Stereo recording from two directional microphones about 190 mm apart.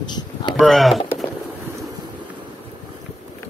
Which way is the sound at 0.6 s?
Centre (ahead or behind).